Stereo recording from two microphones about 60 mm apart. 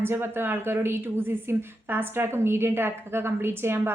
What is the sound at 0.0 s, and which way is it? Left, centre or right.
A woman's voice, right.